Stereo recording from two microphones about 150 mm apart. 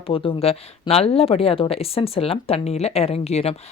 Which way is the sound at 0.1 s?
35° left (ahead or behind).